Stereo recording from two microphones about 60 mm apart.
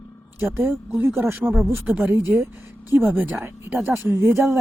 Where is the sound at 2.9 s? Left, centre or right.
Right.